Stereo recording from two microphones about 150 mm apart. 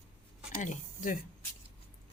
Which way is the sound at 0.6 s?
60° left (ahead or behind).